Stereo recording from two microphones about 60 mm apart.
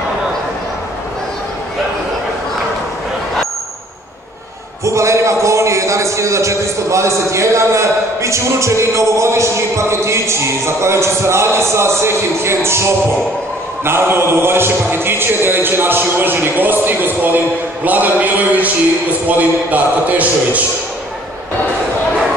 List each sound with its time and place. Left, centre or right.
4.8 s a man's voice: right